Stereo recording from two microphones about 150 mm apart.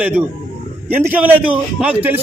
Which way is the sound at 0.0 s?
10° right (ahead or behind).